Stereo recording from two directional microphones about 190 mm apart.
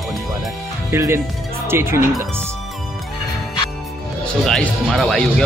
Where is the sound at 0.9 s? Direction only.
15° right (ahead or behind).